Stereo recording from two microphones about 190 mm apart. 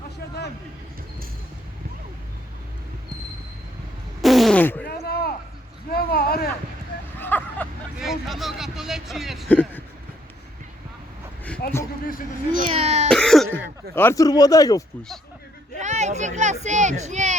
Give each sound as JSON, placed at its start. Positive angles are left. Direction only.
{"t": 4.2, "sound": "fart", "side_deg": 0}
{"t": 4.9, "sound": "a sound", "side_deg": 55}
{"t": 7.2, "sound": "vehicle", "side_deg": 10}
{"t": 7.9, "sound": "speech", "side_deg": 0}
{"t": 11.6, "sound": "a sound", "side_deg": 55}
{"t": 12.5, "sound": "baby cry", "side_deg": -30}
{"t": 13.1, "sound": "cough", "side_deg": 5}
{"t": 13.9, "sound": "speech", "side_deg": 15}
{"t": 15.8, "sound": "speech", "side_deg": -40}